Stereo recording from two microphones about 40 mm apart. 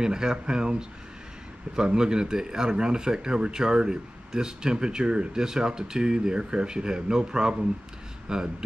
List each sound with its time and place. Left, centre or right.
0.0 s speech: centre